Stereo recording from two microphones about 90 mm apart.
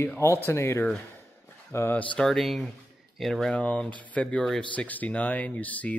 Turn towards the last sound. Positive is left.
turn(degrees=15)  # may be behind; listen again after turning